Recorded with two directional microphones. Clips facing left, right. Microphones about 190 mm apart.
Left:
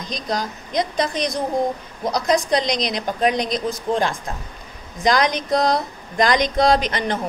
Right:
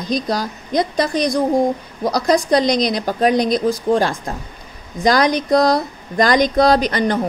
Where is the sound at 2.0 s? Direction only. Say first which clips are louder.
Right 3 dB; 35° right (ahead or behind).